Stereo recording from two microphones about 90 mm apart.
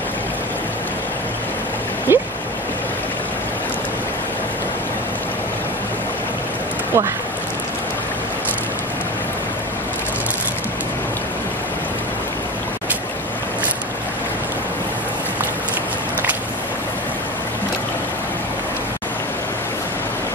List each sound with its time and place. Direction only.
2.1 s speech: 25° right (ahead or behind)